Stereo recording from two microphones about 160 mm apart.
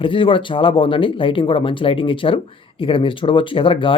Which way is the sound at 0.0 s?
35° left (ahead or behind).